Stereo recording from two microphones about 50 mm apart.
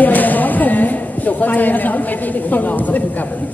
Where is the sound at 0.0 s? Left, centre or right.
Left.